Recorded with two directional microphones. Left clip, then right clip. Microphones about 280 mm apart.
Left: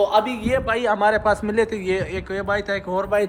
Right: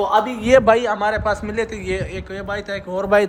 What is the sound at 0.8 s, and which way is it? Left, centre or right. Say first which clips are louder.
A man's voice: left 1 dB; centre.